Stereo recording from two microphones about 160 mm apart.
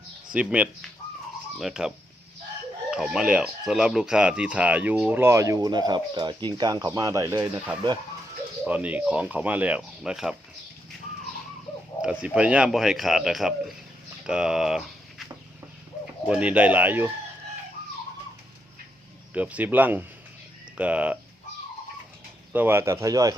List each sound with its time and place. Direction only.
0.3 s speech: 10° right (ahead or behind)
2.9 s speech: 5° right (ahead or behind)
12.0 s speech: 5° right (ahead or behind)
19.3 s speech: 10° right (ahead or behind)
22.5 s speech: 15° right (ahead or behind)